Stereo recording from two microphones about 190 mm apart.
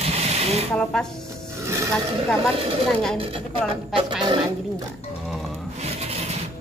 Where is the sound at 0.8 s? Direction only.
5° left (ahead or behind).